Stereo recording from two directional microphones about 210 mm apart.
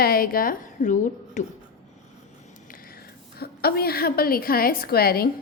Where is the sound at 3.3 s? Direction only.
45° left (ahead or behind).